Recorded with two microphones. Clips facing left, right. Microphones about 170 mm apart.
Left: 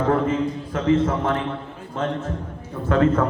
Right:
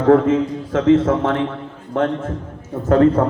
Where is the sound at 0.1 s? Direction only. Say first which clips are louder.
Right 12 dB; 90° right.